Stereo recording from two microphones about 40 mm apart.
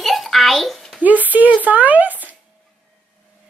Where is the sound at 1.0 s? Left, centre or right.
Right.